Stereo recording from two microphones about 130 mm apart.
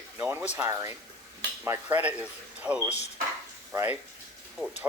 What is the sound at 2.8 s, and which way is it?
Speech, 55° left (ahead or behind).